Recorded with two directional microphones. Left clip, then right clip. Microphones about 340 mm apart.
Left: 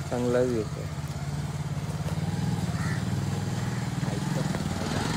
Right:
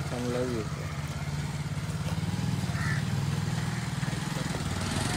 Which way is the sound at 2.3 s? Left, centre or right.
Left.